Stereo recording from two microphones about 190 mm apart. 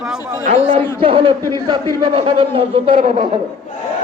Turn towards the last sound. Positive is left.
turn(degrees=-40)  # may be behind; listen again after turning